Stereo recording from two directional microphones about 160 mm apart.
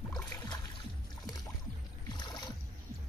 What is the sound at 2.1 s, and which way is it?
Boat, 25° left (ahead or behind).